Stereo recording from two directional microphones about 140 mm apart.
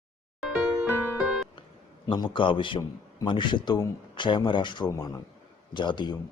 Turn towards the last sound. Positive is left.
turn(degrees=35)  # may be behind; listen again after turning